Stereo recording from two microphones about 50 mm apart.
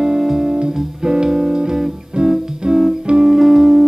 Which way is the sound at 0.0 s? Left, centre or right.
Centre.